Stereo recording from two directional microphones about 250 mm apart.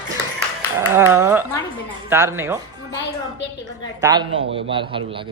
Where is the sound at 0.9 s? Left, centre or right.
Centre.